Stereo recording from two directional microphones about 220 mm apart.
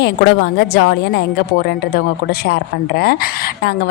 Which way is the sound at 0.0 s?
55° left (ahead or behind).